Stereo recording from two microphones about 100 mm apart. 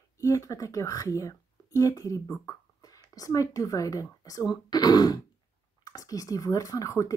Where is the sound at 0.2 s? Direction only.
30° left (ahead or behind).